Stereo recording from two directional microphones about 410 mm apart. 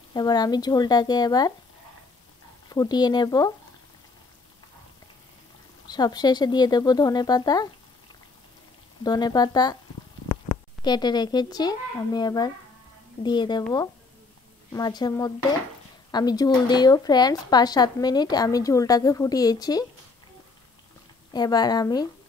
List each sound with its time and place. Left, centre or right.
0.1 s speech: centre
2.7 s speech: centre
5.9 s speech: centre
9.0 s speech: centre
21.3 s speech: centre